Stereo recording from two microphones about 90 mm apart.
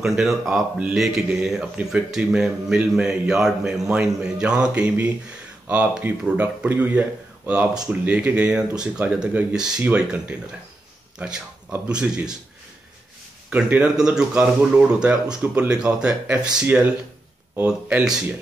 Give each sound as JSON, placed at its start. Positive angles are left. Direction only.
{"t": 0.0, "sound": "speech", "side_deg": -5}
{"t": 13.5, "sound": "speech", "side_deg": -15}